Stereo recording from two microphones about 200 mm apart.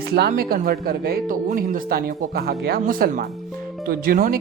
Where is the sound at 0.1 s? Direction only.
55° right (ahead or behind).